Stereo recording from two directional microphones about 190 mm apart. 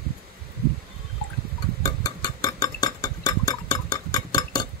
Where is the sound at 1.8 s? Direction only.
20° left (ahead or behind).